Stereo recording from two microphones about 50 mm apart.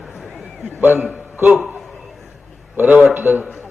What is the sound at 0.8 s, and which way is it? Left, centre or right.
Speech, right.